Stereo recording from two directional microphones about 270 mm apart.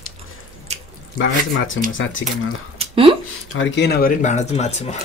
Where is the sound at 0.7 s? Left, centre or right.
Right.